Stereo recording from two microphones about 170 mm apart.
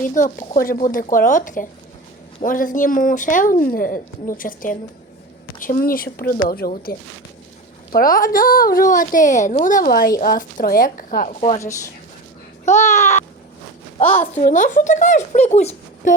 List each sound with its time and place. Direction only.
0.0 s a woman's voice: 50° left (ahead or behind)
7.9 s a woman's voice: 55° left (ahead or behind)
11.3 s a woman's voice: 35° left (ahead or behind)
12.6 s a child's voice: 40° left (ahead or behind)
14.0 s a woman's voice: 10° left (ahead or behind)
14.3 s speech: 45° left (ahead or behind)